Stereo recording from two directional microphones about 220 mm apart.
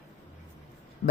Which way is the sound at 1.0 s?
40° left (ahead or behind).